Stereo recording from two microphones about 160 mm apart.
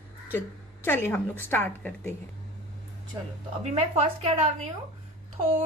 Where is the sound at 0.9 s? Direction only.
15° left (ahead or behind).